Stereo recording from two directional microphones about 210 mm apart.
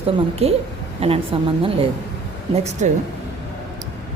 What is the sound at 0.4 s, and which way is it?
A woman's voice, 30° right (ahead or behind).